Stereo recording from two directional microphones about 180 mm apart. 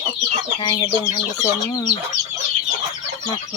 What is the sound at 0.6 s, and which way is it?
Speech, 25° left (ahead or behind).